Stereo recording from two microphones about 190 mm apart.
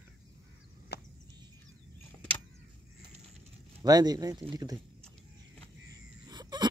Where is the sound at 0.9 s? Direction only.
60° left (ahead or behind).